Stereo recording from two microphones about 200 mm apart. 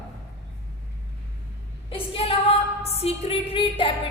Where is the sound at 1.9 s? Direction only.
30° left (ahead or behind).